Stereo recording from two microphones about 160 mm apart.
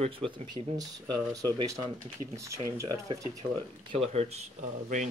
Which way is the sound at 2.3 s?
20° right (ahead or behind).